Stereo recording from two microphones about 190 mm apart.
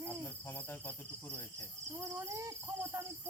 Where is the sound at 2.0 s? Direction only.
15° right (ahead or behind).